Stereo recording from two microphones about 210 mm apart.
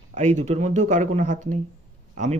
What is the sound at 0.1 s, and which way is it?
Speech, 35° right (ahead or behind).